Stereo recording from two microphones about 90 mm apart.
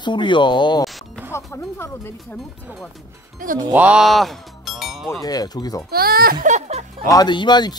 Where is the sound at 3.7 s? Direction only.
15° right (ahead or behind).